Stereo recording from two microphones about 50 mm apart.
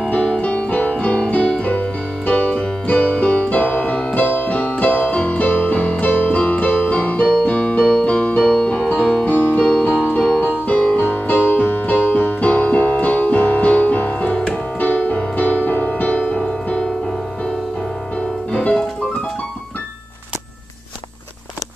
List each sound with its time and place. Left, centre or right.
0.1 s music: left
1.6 s keyboard: left
8.5 s music: left
9.6 s music: centre
14.3 s music: centre
14.8 s music: left
18.5 s music: left